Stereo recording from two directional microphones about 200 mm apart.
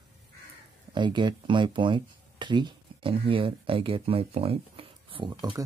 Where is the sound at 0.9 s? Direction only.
25° right (ahead or behind).